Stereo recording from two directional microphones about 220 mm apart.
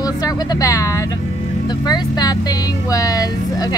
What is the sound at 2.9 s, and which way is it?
Speech, 15° left (ahead or behind).